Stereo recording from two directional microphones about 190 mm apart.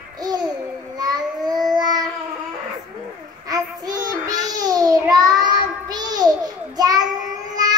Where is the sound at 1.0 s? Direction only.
20° right (ahead or behind).